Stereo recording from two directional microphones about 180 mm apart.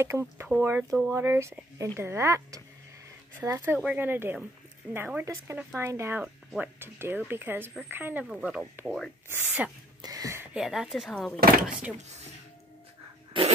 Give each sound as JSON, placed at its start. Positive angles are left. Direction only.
{"t": 0.0, "sound": "speech", "side_deg": -15}
{"t": 11.3, "sound": "speech", "side_deg": -55}